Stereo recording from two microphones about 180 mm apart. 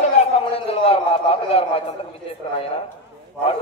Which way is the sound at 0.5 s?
30° left (ahead or behind).